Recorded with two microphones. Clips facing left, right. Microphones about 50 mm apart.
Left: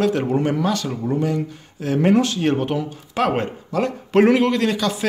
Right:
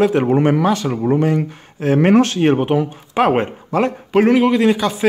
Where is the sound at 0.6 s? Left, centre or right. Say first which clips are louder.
Right 5 dB; right.